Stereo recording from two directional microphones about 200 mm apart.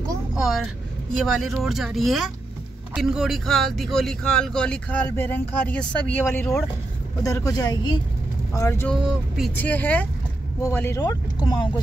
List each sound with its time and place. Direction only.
0.4 s speech: centre (ahead or behind); by 11.7 s 20° left (ahead or behind)